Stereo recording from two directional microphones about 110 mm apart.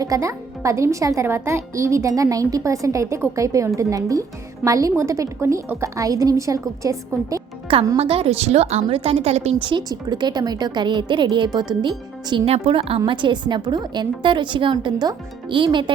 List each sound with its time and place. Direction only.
0.0 s a child's voice: 30° right (ahead or behind)
7.9 s a woman's voice: 60° right (ahead or behind); by 9.6 s 75° right (ahead or behind)
9.6 s a woman's voice: 45° right (ahead or behind)
12.5 s a woman's voice: 60° right (ahead or behind)
13.1 s a woman's voice: 45° right (ahead or behind)